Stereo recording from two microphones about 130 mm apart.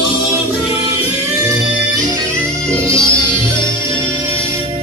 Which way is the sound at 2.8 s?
20° right (ahead or behind).